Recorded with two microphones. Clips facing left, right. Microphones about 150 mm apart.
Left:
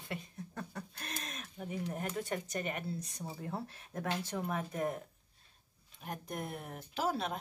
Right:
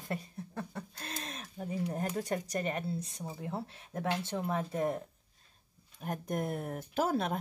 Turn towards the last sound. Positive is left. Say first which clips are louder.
# right 4 dB
turn(degrees=-50)  # may be behind; listen again after turning